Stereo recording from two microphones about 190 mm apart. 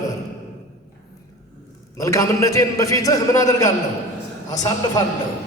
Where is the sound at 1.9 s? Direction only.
15° left (ahead or behind).